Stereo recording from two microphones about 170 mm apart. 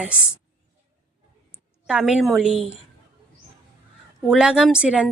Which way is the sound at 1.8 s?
5° right (ahead or behind).